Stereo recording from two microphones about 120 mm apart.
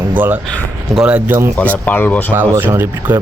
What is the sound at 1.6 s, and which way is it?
Speech, 15° left (ahead or behind).